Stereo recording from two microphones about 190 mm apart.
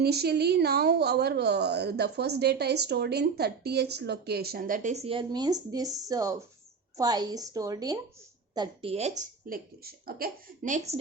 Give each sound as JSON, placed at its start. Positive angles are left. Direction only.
{"t": 0.0, "sound": "a woman's voice", "side_deg": -55}
{"t": 9.5, "sound": "speech", "side_deg": -50}